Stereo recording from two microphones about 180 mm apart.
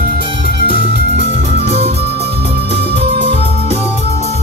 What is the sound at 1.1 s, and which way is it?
Music, 35° right (ahead or behind).